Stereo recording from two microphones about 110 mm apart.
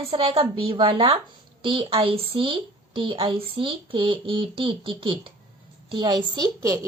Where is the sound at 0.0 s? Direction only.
60° right (ahead or behind).